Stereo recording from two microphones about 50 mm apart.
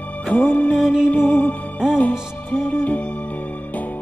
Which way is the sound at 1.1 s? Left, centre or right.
Left.